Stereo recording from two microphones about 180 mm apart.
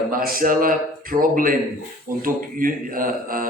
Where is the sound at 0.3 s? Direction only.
50° right (ahead or behind).